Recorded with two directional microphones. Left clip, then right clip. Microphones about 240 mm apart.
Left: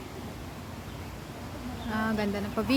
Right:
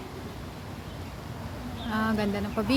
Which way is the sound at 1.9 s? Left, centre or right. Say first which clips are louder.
Right 2 dB; centre.